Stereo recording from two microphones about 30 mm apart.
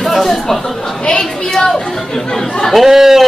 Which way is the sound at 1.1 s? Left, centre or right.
Centre.